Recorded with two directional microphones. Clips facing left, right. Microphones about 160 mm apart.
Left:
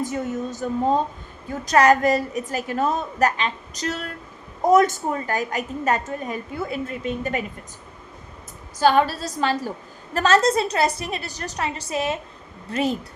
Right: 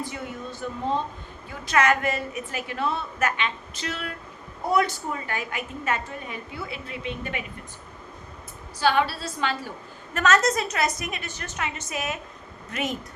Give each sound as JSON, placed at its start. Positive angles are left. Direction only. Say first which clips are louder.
{"t": 0.0, "sound": "a woman's voice", "louder": "left 8 dB", "side_deg": 45}
{"t": 8.8, "sound": "a woman's voice", "louder": "left 5 dB", "side_deg": 40}